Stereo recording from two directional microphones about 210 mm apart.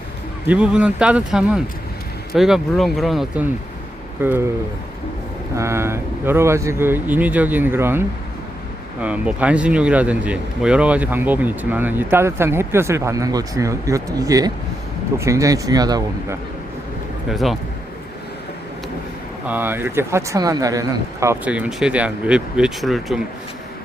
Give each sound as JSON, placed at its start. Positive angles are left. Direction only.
{"t": 0.4, "sound": "speech", "side_deg": -5}
{"t": 5.5, "sound": "speech", "side_deg": -15}
{"t": 17.2, "sound": "speech", "side_deg": 0}
{"t": 19.5, "sound": "speech", "side_deg": -10}